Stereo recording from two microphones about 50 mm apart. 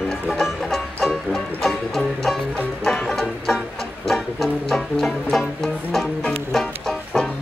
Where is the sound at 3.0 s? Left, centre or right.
Centre.